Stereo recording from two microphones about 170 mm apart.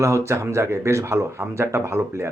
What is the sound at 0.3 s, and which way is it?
Speech, 15° right (ahead or behind).